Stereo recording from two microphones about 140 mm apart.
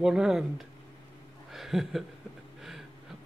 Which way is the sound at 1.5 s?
Centre (ahead or behind).